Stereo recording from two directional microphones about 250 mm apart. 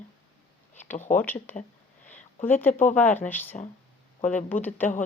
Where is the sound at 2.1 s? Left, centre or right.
Centre.